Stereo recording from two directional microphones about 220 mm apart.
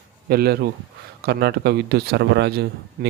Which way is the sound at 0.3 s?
45° right (ahead or behind).